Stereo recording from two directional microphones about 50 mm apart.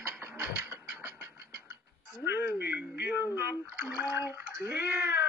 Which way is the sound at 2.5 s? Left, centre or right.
Right.